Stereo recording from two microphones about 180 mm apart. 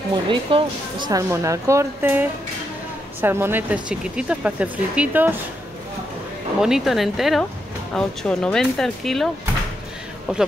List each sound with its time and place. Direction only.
0.1 s speech: 30° right (ahead or behind); by 5.3 s 10° right (ahead or behind)
6.6 s speech: centre (ahead or behind)